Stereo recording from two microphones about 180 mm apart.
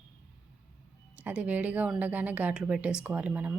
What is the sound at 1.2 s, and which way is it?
A woman's voice, 10° right (ahead or behind).